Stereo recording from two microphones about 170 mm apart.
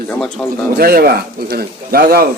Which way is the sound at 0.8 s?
65° right (ahead or behind).